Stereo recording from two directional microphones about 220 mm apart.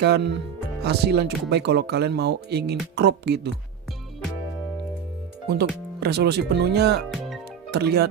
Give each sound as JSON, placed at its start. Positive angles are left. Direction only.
{"t": 0.0, "sound": "speech", "side_deg": -50}
{"t": 5.5, "sound": "speech", "side_deg": -50}